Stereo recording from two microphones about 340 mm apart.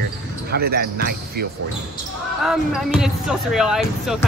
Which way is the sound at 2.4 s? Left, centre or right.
Centre.